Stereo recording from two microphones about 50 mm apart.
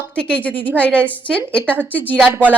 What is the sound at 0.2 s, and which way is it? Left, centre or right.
A woman's voice, left.